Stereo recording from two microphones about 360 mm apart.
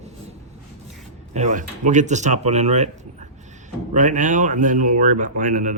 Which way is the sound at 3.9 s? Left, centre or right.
Right.